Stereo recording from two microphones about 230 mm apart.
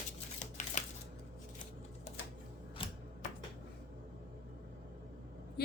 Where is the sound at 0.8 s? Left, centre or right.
Left.